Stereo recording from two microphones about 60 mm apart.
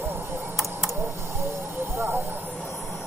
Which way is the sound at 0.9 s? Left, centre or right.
Right.